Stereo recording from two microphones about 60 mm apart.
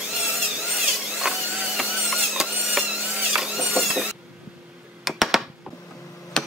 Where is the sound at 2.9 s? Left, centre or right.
Centre.